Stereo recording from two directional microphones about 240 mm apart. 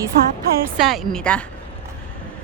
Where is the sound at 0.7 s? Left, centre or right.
Centre.